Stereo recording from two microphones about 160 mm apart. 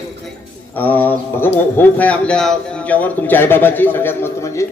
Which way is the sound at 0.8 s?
10° left (ahead or behind).